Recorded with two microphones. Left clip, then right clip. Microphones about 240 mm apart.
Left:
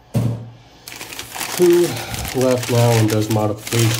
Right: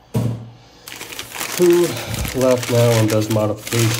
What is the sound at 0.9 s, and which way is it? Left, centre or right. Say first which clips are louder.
Speech: right 1 dB; centre.